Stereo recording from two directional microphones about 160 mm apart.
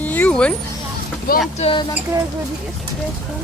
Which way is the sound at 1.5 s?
40° left (ahead or behind).